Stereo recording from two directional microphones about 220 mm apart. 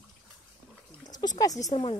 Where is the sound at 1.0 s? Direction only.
20° left (ahead or behind).